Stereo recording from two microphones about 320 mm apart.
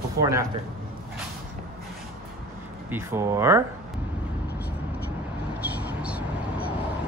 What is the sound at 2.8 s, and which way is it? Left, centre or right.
Speech, centre.